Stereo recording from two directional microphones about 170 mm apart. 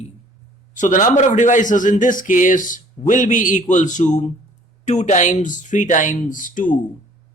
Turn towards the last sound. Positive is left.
turn(degrees=50)  # may be behind; listen again after turning